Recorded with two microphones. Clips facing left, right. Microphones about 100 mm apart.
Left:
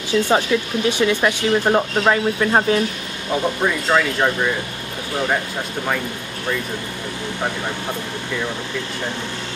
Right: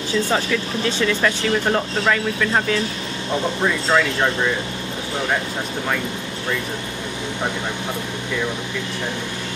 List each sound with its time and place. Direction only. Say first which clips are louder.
0.3 s speech: left 3 dB; 20° left (ahead or behind)
3.3 s speech: left 1 dB; 5° left (ahead or behind)